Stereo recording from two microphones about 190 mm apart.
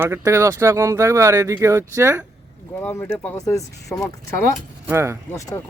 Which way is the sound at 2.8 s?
10° left (ahead or behind).